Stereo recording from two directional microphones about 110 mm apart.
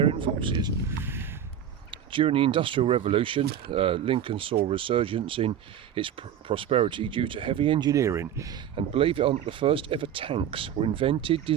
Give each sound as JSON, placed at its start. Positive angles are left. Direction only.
{"t": 0.0, "sound": "speech", "side_deg": -55}
{"t": 0.9, "sound": "a sound", "side_deg": -20}
{"t": 2.1, "sound": "speech", "side_deg": -55}
{"t": 7.9, "sound": "speech", "side_deg": -25}
{"t": 8.7, "sound": "speech", "side_deg": -60}